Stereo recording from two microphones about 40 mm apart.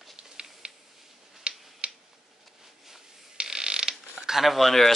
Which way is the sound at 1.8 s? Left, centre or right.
Right.